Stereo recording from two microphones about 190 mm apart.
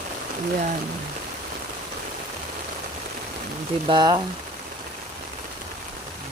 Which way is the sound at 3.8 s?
25° right (ahead or behind).